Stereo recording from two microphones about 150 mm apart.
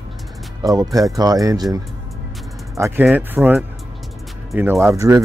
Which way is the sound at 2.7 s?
20° right (ahead or behind).